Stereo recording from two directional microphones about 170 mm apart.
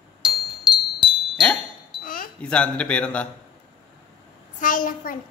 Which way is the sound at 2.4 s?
5° left (ahead or behind).